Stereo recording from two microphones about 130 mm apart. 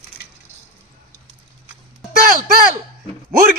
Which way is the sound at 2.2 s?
90° right.